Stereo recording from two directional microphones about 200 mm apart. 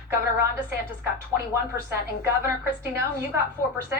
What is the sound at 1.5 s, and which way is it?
A woman's voice, 15° right (ahead or behind).